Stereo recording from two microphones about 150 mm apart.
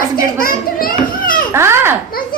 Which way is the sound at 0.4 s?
70° left (ahead or behind).